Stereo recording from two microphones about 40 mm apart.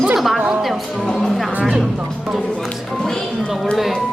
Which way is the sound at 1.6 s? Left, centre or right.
Centre.